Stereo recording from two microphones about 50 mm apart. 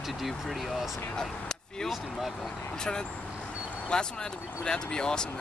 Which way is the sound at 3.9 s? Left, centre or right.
Centre.